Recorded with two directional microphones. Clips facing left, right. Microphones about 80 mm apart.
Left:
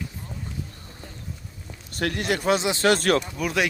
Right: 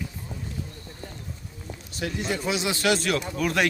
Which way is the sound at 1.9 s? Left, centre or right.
Left.